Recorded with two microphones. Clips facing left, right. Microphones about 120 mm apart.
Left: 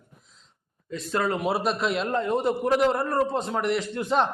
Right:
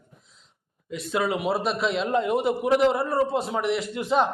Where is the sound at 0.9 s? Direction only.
10° right (ahead or behind).